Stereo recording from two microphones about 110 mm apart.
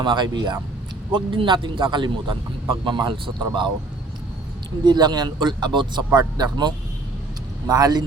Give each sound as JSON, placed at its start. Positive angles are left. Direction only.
{"t": 0.0, "sound": "speech", "side_deg": -45}
{"t": 4.9, "sound": "speech", "side_deg": -40}